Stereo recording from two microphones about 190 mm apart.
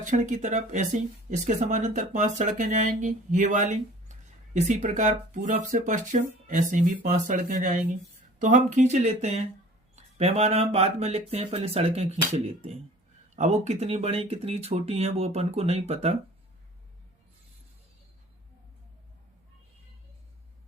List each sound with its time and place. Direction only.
0.0 s speech: 40° right (ahead or behind)